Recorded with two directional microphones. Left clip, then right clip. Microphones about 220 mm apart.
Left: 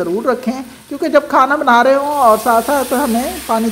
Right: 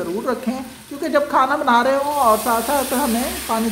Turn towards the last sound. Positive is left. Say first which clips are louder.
# left 5 dB
turn(degrees=0)  # may be behind; listen again after turning